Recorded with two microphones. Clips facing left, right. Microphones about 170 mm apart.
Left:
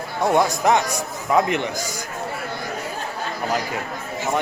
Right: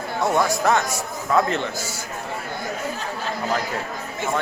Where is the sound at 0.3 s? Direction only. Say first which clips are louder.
Left 2 dB; 20° left (ahead or behind).